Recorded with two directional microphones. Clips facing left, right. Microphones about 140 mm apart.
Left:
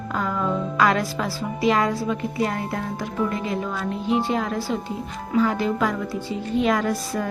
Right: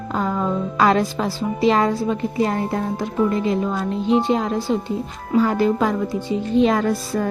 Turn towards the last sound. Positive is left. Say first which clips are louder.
# right 3 dB
turn(degrees=-25)  # may be behind; listen again after turning